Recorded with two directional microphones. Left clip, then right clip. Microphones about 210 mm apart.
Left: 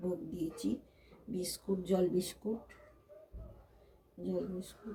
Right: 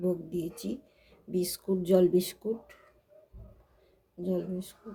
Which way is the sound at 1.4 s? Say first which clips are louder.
Right 5 dB; 50° right (ahead or behind).